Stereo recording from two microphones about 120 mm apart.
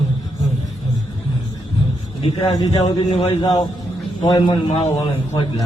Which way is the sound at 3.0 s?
55° left (ahead or behind).